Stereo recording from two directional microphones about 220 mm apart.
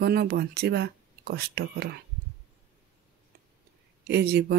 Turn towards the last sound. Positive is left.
turn(degrees=-45)  # may be behind; listen again after turning